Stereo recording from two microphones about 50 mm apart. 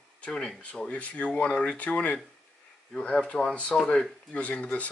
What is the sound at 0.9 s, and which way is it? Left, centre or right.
Speech, left.